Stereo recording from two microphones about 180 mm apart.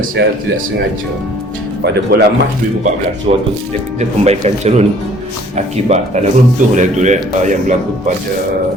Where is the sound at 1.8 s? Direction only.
65° right (ahead or behind).